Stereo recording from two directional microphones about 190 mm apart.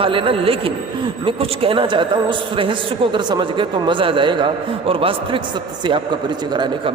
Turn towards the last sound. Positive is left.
turn(degrees=-25)  # may be behind; listen again after turning